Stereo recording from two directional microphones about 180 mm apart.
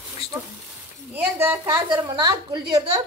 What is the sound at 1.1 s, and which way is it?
A woman's voice, 10° right (ahead or behind).